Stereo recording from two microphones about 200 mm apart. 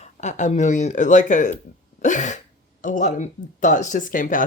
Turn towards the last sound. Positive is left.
turn(degrees=40)  # may be behind; listen again after turning